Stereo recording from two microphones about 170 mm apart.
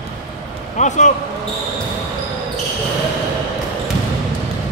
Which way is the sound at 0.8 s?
45° left (ahead or behind).